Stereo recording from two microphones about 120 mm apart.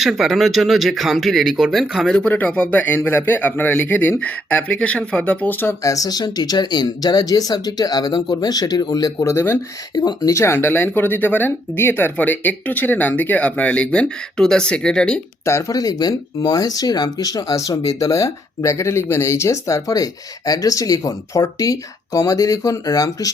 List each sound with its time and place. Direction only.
0.0 s speech: centre (ahead or behind); by 9.6 s 20° left (ahead or behind)
9.9 s speech: 35° left (ahead or behind); by 15.2 s 5° left (ahead or behind)
15.4 s speech: 25° left (ahead or behind)